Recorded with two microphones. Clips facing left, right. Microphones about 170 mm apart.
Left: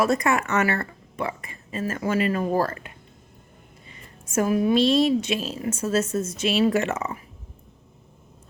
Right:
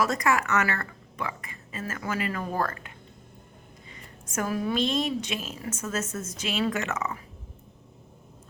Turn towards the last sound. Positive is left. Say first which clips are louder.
# left 6 dB
turn(degrees=30)  # may be behind; listen again after turning